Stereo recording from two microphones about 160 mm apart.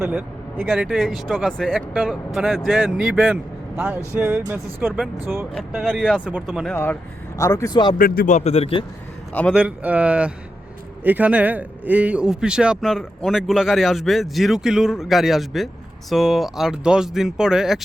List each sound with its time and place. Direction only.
0.0 s a man's voice: 10° right (ahead or behind)
5.5 s a man's voice: centre (ahead or behind)
7.3 s speech: 20° left (ahead or behind)
7.9 s a man's voice: 65° left (ahead or behind)
8.4 s a man's voice: 40° left (ahead or behind)
9.5 s a man's voice: 10° right (ahead or behind)